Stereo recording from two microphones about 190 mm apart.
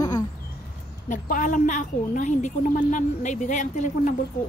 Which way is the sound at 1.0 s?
45° left (ahead or behind).